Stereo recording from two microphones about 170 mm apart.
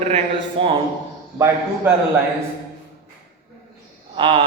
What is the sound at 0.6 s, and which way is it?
Speech, 30° right (ahead or behind).